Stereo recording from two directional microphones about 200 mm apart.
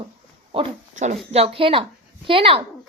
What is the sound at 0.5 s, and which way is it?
A woman's voice, 25° right (ahead or behind).